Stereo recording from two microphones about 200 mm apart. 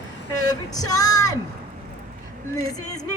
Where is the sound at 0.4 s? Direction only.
20° left (ahead or behind).